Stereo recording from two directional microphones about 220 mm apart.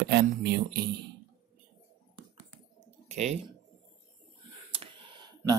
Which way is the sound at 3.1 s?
30° right (ahead or behind).